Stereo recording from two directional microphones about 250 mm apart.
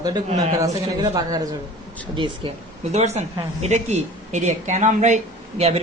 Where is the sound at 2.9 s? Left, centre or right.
Right.